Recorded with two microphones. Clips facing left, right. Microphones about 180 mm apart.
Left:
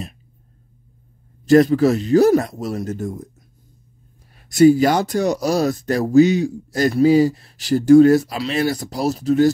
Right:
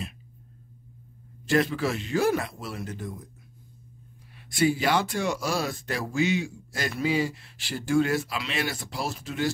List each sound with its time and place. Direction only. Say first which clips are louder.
1.4 s speech: left 12 dB; 40° left (ahead or behind)
4.5 s speech: left 12 dB; 40° left (ahead or behind)